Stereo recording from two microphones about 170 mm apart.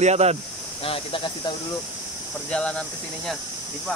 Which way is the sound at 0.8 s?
30° left (ahead or behind).